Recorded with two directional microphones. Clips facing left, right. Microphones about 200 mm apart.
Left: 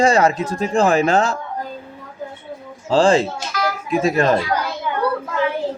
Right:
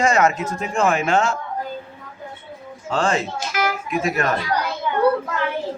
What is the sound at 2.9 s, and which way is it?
Speech, 30° left (ahead or behind).